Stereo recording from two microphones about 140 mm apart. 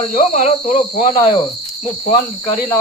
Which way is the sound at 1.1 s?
35° left (ahead or behind).